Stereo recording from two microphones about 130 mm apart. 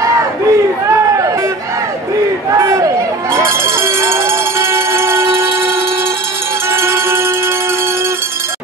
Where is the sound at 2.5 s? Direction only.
25° right (ahead or behind).